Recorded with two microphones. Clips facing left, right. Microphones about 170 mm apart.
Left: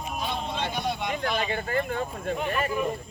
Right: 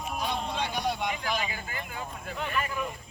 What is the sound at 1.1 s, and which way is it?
Speech, 55° left (ahead or behind).